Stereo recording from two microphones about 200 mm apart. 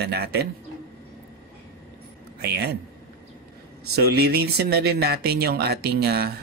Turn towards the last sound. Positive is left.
turn(degrees=-55)  # may be behind; listen again after turning